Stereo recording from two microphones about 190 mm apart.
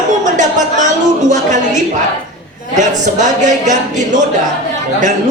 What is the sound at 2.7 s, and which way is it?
A man's voice, 40° right (ahead or behind).